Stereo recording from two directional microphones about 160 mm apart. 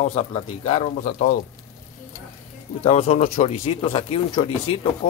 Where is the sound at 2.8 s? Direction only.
40° left (ahead or behind).